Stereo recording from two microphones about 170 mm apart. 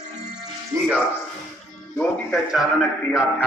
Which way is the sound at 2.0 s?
Centre (ahead or behind).